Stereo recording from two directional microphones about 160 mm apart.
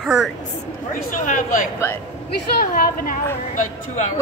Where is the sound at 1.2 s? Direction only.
50° left (ahead or behind).